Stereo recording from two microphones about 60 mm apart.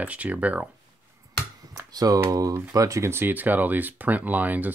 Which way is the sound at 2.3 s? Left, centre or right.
Right.